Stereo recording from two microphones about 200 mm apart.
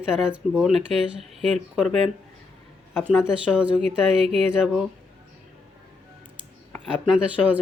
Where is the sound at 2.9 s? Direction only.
5° right (ahead or behind).